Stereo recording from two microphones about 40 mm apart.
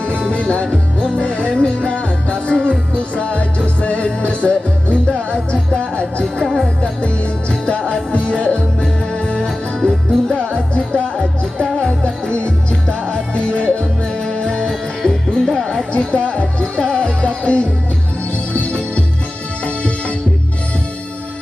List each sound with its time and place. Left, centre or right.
0.3 s music: left
6.4 s music: centre
6.8 s music: left
14.7 s music: centre
15.9 s music: left